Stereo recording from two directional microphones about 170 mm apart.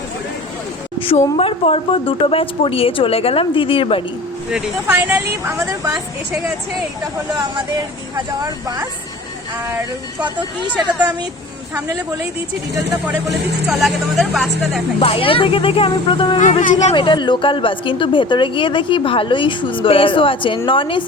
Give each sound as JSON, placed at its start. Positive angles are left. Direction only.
{"t": 0.9, "sound": "a woman's voice", "side_deg": 35}
{"t": 4.5, "sound": "speech", "side_deg": -10}
{"t": 13.7, "sound": "speech", "side_deg": 0}
{"t": 14.9, "sound": "speech", "side_deg": 30}
{"t": 16.4, "sound": "speech", "side_deg": 45}
{"t": 16.9, "sound": "a woman's voice", "side_deg": 30}